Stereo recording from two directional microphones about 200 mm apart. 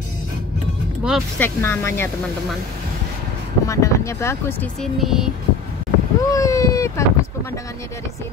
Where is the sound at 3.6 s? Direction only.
15° left (ahead or behind); by 5.3 s centre (ahead or behind).